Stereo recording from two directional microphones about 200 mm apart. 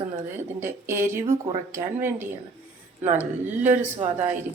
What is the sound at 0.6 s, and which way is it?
Speech, 10° right (ahead or behind).